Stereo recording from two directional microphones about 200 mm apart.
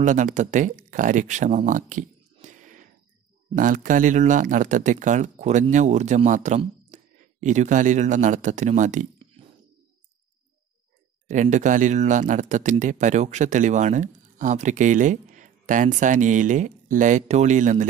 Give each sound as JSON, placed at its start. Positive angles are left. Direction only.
{"t": 0.0, "sound": "speech", "side_deg": -35}
{"t": 11.2, "sound": "speech", "side_deg": -35}